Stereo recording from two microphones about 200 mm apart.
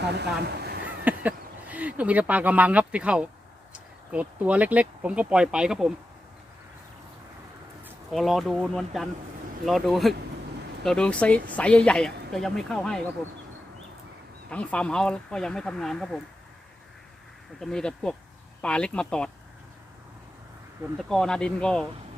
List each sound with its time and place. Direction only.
0.4 s a sound: 55° right (ahead or behind)
0.9 s speech: 10° right (ahead or behind)
8.1 s speech: centre (ahead or behind)
14.5 s speech: 5° left (ahead or behind)
17.6 s speech: 5° left (ahead or behind)
21.0 s speech: 5° left (ahead or behind)